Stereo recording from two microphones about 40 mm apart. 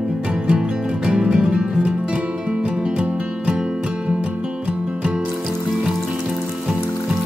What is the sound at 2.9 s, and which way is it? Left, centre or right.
Music, right.